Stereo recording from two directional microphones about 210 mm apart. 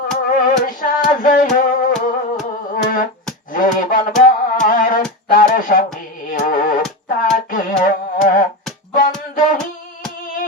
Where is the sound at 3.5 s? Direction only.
40° left (ahead or behind).